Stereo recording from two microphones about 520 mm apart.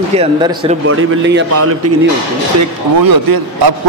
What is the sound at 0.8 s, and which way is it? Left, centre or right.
Speech, right.